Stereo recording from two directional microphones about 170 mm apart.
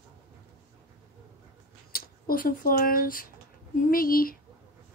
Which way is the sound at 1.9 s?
60° left (ahead or behind).